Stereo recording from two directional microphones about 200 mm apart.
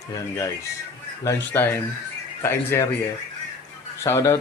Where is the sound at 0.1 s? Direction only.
15° left (ahead or behind).